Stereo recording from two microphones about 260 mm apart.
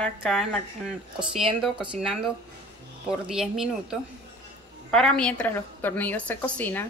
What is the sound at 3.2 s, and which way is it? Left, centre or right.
A woman's voice, centre.